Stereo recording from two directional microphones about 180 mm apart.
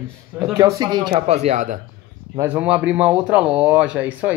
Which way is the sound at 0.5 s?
20° right (ahead or behind).